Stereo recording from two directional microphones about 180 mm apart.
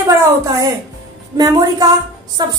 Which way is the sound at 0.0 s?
20° right (ahead or behind).